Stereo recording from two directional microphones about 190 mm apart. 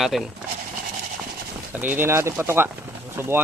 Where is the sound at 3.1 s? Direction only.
15° right (ahead or behind).